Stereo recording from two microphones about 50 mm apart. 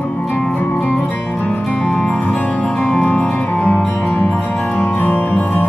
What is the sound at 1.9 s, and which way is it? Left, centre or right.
Music, centre.